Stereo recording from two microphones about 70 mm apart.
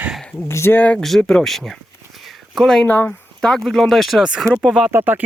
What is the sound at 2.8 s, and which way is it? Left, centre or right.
Speech, left.